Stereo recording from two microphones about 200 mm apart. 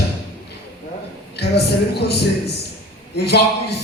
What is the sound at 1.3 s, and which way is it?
A man's voice, 55° left (ahead or behind).